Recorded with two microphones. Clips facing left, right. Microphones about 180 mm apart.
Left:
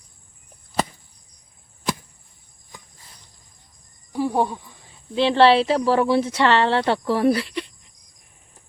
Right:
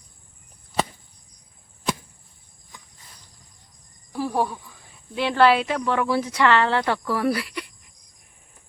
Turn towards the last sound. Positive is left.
turn(degrees=25)  # may be behind; listen again after turning